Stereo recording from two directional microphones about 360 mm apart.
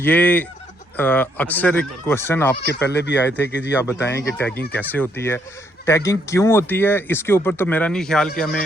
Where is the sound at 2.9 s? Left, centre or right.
Left.